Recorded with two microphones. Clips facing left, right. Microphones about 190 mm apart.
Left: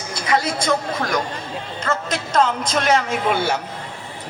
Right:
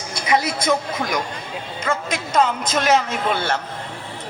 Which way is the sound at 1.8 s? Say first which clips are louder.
Even; 10° right (ahead or behind).